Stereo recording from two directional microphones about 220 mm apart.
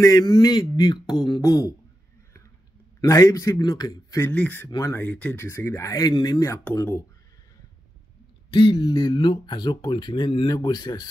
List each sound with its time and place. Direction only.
0.0 s speech: 20° left (ahead or behind)
3.0 s speech: 15° left (ahead or behind)
8.5 s speech: 25° left (ahead or behind)